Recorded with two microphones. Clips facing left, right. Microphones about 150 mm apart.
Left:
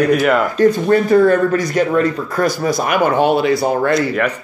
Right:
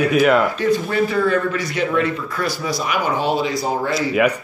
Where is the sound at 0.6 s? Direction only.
45° left (ahead or behind).